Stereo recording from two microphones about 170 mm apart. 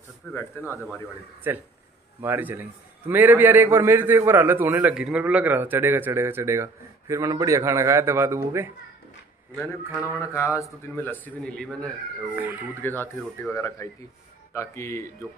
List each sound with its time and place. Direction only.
0.3 s speech: 15° left (ahead or behind)
1.5 s a man's voice: 15° right (ahead or behind)
10.3 s speech: 20° left (ahead or behind)
12.3 s a man's voice: 10° right (ahead or behind)
12.8 s speech: 10° left (ahead or behind)